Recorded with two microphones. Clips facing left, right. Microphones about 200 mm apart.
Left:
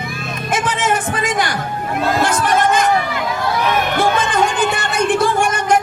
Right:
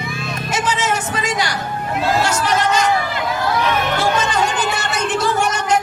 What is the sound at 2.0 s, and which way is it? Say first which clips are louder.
Speech: left 1 dB; 55° left (ahead or behind).